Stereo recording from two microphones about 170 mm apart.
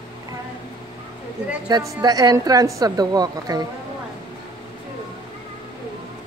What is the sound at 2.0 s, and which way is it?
A woman's voice, 20° right (ahead or behind).